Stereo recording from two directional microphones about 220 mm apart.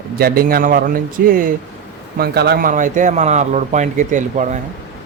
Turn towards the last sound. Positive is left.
turn(degrees=-35)  # may be behind; listen again after turning